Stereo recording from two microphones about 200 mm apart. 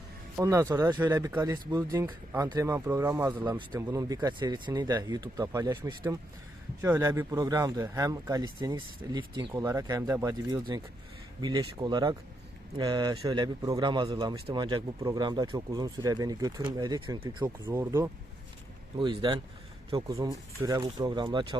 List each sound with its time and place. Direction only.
0.3 s speech: 15° right (ahead or behind)
18.9 s speech: 25° right (ahead or behind)